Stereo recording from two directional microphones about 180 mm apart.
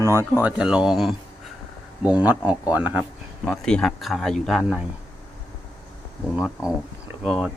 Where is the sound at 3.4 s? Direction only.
5° left (ahead or behind).